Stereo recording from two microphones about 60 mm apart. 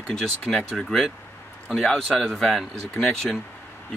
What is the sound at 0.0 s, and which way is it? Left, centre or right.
Speech, centre.